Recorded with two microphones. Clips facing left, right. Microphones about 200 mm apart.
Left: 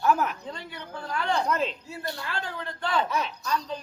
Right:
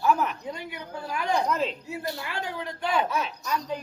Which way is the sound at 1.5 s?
Centre (ahead or behind).